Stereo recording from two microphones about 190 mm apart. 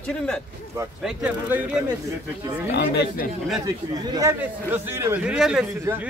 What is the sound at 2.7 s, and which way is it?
Speech, 60° left (ahead or behind).